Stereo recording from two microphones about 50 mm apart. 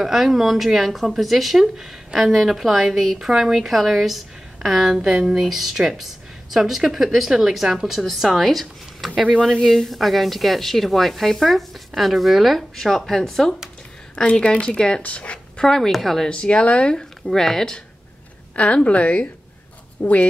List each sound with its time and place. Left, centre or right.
0.0 s speech: centre
9.3 s speech: centre
14.1 s speech: centre
15.6 s speech: centre
16.3 s speech: left
17.3 s speech: centre
18.6 s speech: left